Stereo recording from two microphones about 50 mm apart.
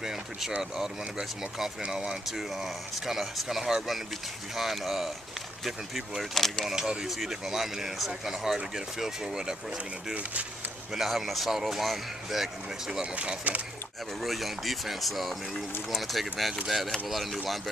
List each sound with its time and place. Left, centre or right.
0.0 s speech: centre
1.9 s speech: centre
6.3 s speech: centre
6.6 s speech: centre
10.9 s speech: centre
13.1 s speech: right
14.2 s speech: centre